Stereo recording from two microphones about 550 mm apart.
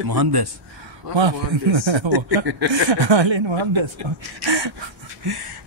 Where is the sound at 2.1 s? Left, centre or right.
Right.